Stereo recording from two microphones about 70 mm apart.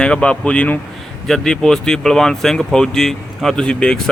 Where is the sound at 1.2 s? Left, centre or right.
Centre.